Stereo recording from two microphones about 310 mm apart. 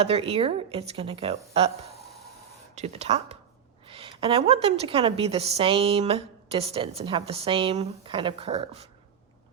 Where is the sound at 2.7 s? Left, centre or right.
Right.